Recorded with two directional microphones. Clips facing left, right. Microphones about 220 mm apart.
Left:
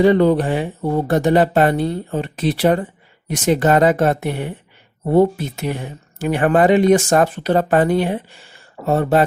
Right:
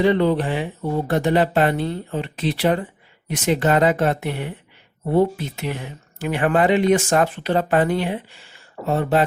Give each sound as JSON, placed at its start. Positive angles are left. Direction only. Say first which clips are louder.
{"t": 0.0, "sound": "speech", "louder": "left 4 dB", "side_deg": 45}